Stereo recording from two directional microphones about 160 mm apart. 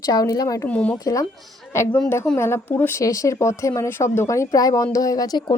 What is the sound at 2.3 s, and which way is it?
Speech, 15° left (ahead or behind).